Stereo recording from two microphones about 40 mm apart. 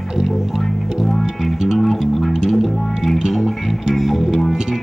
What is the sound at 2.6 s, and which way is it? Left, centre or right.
Music, centre.